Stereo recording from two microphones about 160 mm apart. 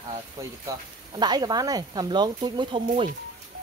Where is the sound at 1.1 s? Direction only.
25° right (ahead or behind).